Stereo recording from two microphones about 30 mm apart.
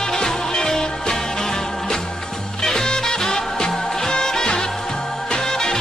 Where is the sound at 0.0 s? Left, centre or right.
Centre.